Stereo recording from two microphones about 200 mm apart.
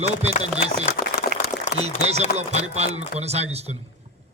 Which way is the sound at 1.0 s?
45° left (ahead or behind).